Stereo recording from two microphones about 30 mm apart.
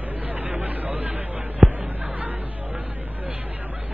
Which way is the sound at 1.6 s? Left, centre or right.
Centre.